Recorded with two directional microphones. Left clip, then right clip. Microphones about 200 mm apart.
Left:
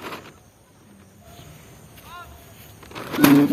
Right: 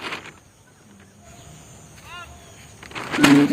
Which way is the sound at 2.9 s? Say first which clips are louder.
Right 1 dB; centre (ahead or behind).